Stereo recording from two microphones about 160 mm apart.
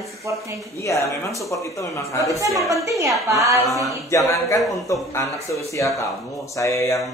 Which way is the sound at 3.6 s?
20° left (ahead or behind).